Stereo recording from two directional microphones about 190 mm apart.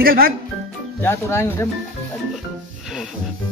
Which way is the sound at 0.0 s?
50° right (ahead or behind).